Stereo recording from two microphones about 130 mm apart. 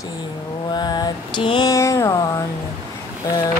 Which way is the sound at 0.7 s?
30° left (ahead or behind).